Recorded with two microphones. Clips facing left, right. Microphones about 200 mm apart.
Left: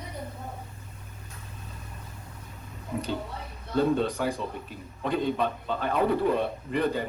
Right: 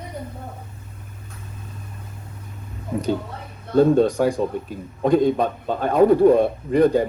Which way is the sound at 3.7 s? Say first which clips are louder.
Right 9 dB; 45° right (ahead or behind).